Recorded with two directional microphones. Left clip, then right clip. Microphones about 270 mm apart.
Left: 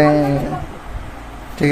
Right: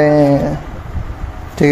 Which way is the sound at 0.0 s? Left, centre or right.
Centre.